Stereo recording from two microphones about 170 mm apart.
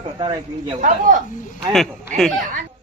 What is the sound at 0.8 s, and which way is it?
Speech, 50° right (ahead or behind).